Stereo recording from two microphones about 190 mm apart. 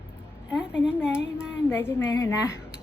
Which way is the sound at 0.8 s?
5° right (ahead or behind).